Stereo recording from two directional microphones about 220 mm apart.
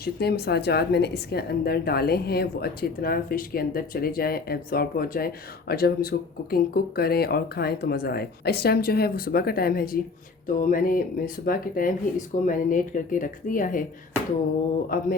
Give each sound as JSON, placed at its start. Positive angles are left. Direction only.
{"t": 0.0, "sound": "a woman's voice", "side_deg": 45}
{"t": 14.9, "sound": "speech", "side_deg": 40}